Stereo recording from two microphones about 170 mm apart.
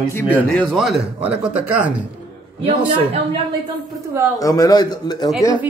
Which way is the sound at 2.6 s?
35° right (ahead or behind).